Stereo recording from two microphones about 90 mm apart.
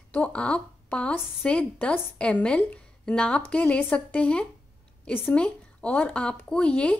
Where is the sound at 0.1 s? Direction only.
10° left (ahead or behind).